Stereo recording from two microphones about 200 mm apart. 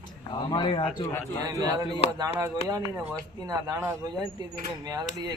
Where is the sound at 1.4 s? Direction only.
20° right (ahead or behind).